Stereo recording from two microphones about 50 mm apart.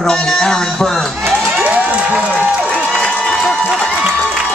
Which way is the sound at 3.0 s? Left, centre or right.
Centre.